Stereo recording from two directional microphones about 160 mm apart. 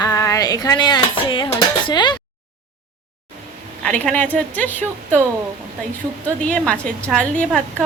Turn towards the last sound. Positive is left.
turn(degrees=5)  # may be behind; listen again after turning